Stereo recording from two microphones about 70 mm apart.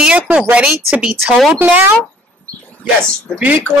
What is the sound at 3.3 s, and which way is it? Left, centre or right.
Speech, right.